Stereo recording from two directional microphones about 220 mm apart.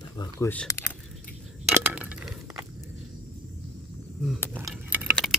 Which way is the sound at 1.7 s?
5° right (ahead or behind).